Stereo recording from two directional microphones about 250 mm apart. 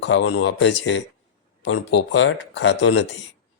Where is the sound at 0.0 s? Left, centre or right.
Left.